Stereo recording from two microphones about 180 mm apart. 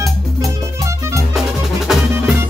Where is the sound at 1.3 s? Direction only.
Centre (ahead or behind).